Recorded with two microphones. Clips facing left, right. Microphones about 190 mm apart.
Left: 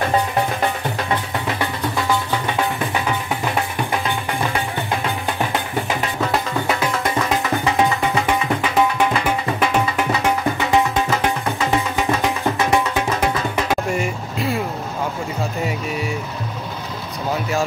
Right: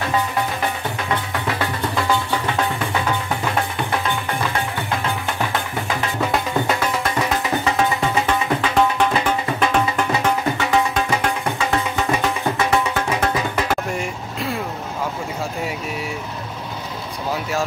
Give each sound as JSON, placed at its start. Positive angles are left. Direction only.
{"t": 8.3, "sound": "music", "side_deg": 10}
{"t": 13.7, "sound": "vehicle", "side_deg": 5}